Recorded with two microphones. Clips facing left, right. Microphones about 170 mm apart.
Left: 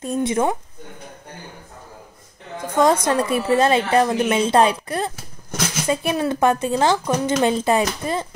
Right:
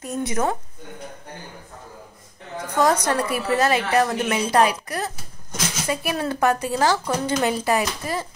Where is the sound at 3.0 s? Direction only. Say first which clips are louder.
Left 3 dB; 25° left (ahead or behind).